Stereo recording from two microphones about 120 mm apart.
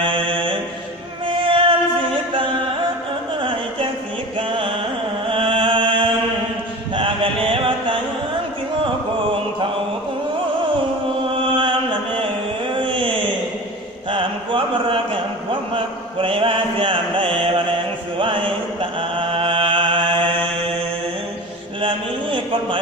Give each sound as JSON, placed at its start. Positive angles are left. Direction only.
{"t": 0.0, "sound": "mantra", "side_deg": -45}
{"t": 1.3, "sound": "music", "side_deg": -45}
{"t": 4.4, "sound": "music", "side_deg": -45}
{"t": 5.3, "sound": "chant", "side_deg": -45}
{"t": 11.4, "sound": "mantra", "side_deg": -45}
{"t": 21.8, "sound": "a sound", "side_deg": -45}